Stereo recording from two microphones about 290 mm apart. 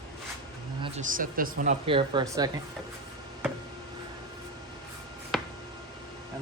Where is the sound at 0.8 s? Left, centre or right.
Right.